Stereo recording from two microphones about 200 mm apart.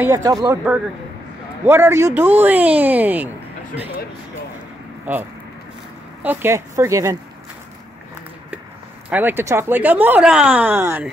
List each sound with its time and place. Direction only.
0.0 s speech: 15° right (ahead or behind)
1.7 s speech: 15° right (ahead or behind)
5.1 s speech: 10° right (ahead or behind)
9.1 s speech: 10° right (ahead or behind)